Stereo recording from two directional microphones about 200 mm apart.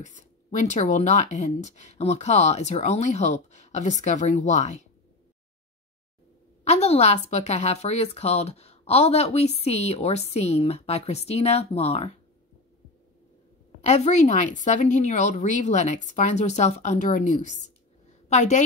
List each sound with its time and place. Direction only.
0.0 s a woman's voice: 40° left (ahead or behind)
6.6 s a woman's voice: 35° left (ahead or behind)
13.7 s a woman's voice: 35° left (ahead or behind)